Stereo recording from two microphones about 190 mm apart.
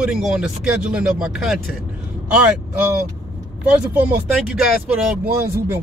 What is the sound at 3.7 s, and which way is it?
Speech, 5° right (ahead or behind).